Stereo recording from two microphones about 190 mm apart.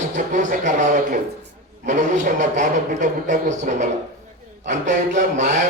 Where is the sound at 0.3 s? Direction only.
40° right (ahead or behind).